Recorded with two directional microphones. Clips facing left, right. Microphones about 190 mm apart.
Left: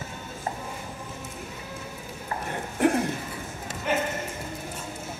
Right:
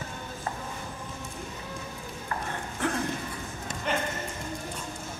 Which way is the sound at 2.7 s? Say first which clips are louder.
Left 8 dB; 15° left (ahead or behind).